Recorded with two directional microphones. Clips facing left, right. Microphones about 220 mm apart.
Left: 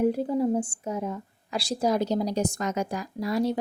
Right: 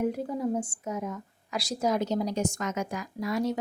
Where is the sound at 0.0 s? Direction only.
30° left (ahead or behind).